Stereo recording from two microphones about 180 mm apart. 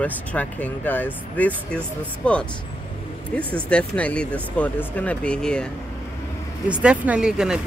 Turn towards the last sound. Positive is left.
turn(degrees=-5)  # may be behind; listen again after turning